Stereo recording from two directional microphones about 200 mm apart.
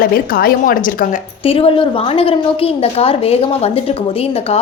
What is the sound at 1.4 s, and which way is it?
A woman's voice, 25° left (ahead or behind).